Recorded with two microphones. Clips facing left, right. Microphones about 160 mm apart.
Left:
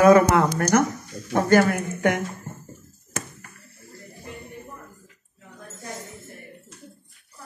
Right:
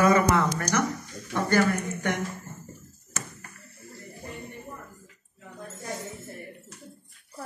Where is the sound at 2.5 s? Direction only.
55° left (ahead or behind).